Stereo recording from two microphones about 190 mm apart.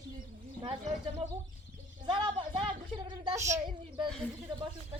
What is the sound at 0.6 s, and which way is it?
Speech, 25° right (ahead or behind).